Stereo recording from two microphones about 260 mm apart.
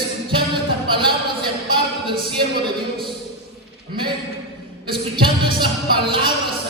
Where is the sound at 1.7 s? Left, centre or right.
Centre.